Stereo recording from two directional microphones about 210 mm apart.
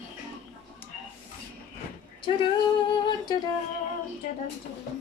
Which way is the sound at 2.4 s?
20° left (ahead or behind).